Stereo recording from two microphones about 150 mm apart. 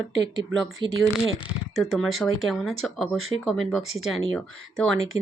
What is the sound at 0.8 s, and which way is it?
Speech, 30° right (ahead or behind).